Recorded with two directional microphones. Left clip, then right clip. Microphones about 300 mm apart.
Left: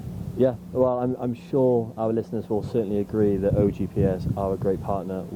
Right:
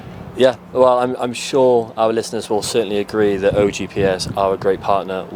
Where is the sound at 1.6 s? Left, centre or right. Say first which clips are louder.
Right 8 dB; right.